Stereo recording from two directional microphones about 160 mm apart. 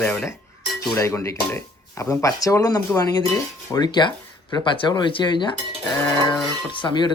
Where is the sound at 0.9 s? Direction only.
20° left (ahead or behind).